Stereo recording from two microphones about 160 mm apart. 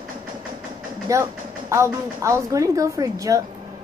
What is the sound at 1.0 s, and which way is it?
Speech, 20° right (ahead or behind).